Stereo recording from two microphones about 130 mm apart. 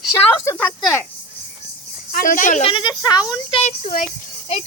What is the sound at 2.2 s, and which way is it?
Speech, 90° left.